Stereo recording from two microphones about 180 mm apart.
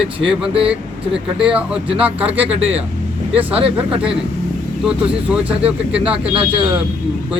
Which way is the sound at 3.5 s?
30° right (ahead or behind).